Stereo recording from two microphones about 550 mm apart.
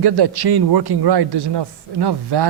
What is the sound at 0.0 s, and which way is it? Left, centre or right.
A man's voice, right.